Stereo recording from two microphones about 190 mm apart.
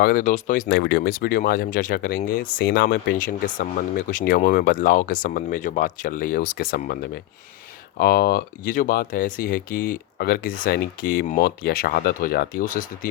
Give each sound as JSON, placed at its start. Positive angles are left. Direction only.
{"t": 0.0, "sound": "speech", "side_deg": 50}
{"t": 0.7, "sound": "speech", "side_deg": 60}